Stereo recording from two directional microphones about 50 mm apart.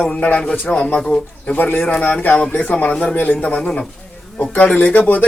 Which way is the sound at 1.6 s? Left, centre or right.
Left.